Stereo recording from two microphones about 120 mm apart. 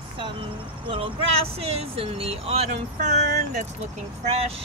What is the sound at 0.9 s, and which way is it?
Speech, 50° right (ahead or behind).